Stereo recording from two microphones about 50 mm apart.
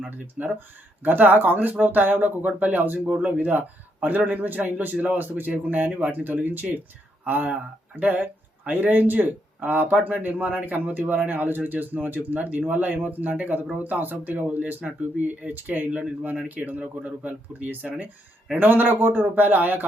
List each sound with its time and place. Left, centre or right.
0.0 s speech: right
15.9 s speech: right
16.5 s speech: right